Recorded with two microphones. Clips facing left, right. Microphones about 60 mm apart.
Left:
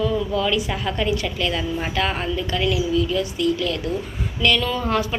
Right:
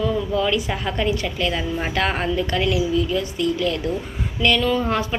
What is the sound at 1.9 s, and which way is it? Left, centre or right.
A woman's voice, right.